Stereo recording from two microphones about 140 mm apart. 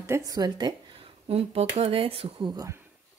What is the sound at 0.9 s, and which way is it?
Speech, 45° right (ahead or behind).